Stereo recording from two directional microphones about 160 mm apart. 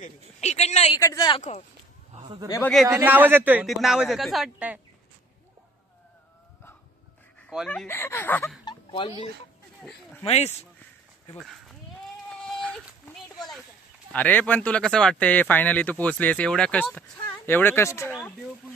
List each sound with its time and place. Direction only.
0.0 s speech: 45° left (ahead or behind)
0.9 s speech: 25° left (ahead or behind)
2.1 s a sound: 45° right (ahead or behind)
2.9 s a man's voice: 15° right (ahead or behind)
3.6 s a man's voice: centre (ahead or behind)
7.3 s speech: 5° left (ahead or behind)
8.6 s a sound: 30° left (ahead or behind)
10.2 s speech: 40° left (ahead or behind)
12.3 s a sound: 5° left (ahead or behind)
14.1 s speech: 10° left (ahead or behind)